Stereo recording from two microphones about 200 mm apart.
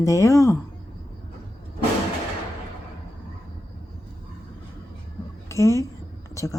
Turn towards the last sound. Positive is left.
turn(degrees=15)  # may be behind; listen again after turning